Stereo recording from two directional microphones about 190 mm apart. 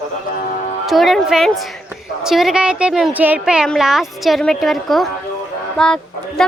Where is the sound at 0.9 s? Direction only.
Centre (ahead or behind).